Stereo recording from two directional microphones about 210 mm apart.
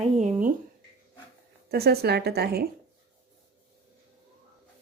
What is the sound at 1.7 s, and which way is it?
Speech, 50° right (ahead or behind).